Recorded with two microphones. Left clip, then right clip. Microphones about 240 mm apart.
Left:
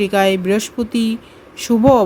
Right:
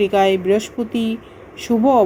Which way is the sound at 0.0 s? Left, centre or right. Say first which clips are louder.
Even; left.